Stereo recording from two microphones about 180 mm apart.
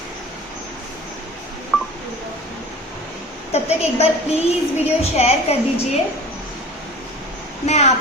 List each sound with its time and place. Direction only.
1.7 s telephone dialing: centre (ahead or behind)
3.5 s a woman's voice: 35° left (ahead or behind)
7.7 s a woman's voice: 40° left (ahead or behind)